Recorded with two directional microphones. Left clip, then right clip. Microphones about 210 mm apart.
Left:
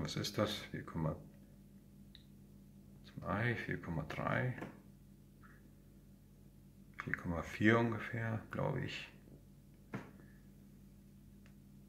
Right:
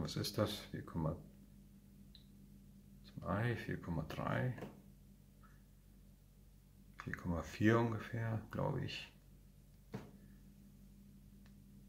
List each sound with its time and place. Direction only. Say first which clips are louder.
0.0 s speech: left 2 dB; 20° right (ahead or behind)
3.2 s speech: left 3 dB; 15° right (ahead or behind)
7.0 s speech: left 4 dB; 15° right (ahead or behind)